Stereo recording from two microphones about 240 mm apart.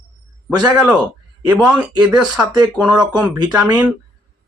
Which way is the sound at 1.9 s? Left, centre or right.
Centre.